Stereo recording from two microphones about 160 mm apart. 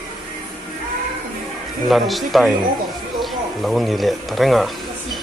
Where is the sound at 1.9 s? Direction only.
Centre (ahead or behind).